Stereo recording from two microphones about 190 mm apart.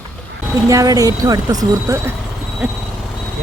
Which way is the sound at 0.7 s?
20° right (ahead or behind).